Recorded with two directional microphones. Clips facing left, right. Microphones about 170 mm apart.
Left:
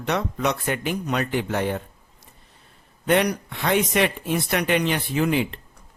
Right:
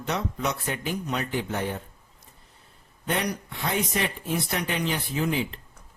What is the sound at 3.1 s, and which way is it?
Speech, 70° left (ahead or behind).